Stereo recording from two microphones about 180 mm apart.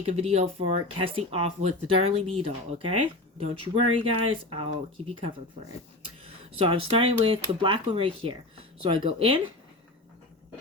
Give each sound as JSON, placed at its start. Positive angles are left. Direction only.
{"t": 0.0, "sound": "speech", "side_deg": -35}